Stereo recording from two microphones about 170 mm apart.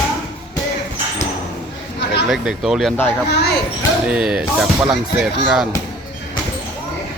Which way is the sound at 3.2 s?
90° left.